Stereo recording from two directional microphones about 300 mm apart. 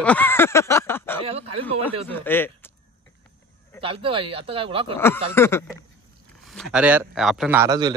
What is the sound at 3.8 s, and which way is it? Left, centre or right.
A man's voice, centre.